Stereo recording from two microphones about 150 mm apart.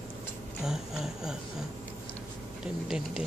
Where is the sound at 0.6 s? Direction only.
5° right (ahead or behind).